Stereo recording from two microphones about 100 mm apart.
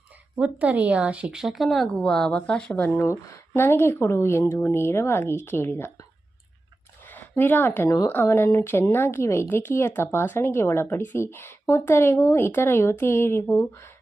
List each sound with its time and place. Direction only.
0.3 s speech: 15° right (ahead or behind); by 6.1 s 25° left (ahead or behind)
7.0 s a sound: 20° left (ahead or behind)
7.9 s a woman's voice: 35° left (ahead or behind)
8.1 s speech: 25° left (ahead or behind)